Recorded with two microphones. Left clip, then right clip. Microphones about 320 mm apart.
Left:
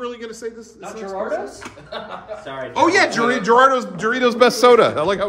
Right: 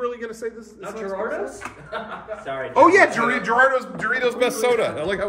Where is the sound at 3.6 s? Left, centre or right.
Centre.